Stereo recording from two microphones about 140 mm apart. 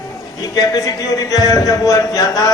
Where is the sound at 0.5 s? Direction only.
25° left (ahead or behind).